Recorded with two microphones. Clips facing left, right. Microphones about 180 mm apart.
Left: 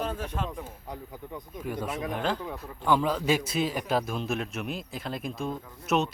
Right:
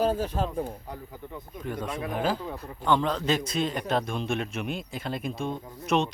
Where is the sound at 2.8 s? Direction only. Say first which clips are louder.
Even; 5° left (ahead or behind).